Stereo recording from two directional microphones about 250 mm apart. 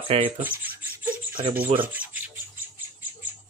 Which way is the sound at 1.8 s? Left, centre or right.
Centre.